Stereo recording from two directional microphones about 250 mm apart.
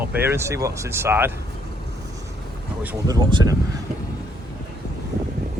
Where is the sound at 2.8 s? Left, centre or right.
Centre.